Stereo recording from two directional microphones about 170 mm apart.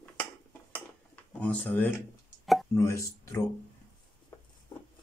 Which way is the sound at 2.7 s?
15° left (ahead or behind).